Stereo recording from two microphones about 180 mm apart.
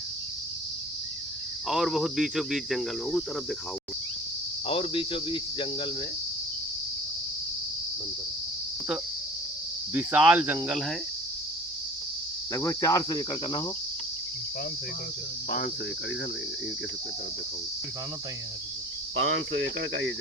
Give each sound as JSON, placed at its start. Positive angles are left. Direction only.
{"t": 1.6, "sound": "cricket", "side_deg": 0}
{"t": 4.6, "sound": "cricket", "side_deg": 30}
{"t": 9.9, "sound": "speech", "side_deg": -10}
{"t": 12.5, "sound": "cricket", "side_deg": 15}
{"t": 15.4, "sound": "cricket", "side_deg": 60}
{"t": 19.3, "sound": "cricket", "side_deg": -90}